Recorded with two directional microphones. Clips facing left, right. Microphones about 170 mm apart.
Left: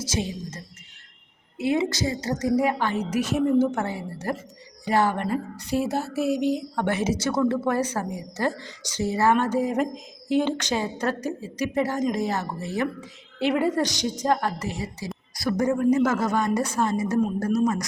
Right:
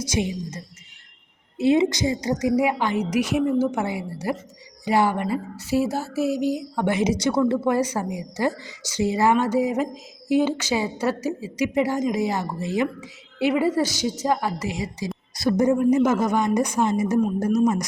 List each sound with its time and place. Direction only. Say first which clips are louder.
0.1 s a woman's voice: right 4 dB; 15° right (ahead or behind)